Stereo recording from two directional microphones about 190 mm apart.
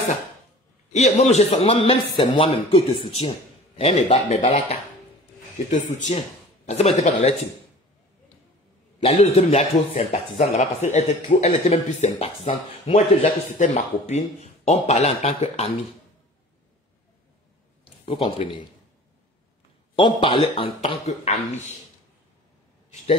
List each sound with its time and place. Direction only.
0.9 s speech: 35° left (ahead or behind)
5.9 s speech: 40° left (ahead or behind)
9.0 s speech: 35° left (ahead or behind)
18.0 s speech: 30° left (ahead or behind)
20.0 s speech: 30° left (ahead or behind)